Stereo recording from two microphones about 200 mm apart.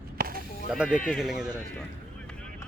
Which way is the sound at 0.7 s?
5° right (ahead or behind).